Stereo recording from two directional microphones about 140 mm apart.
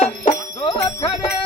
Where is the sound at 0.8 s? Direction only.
25° left (ahead or behind).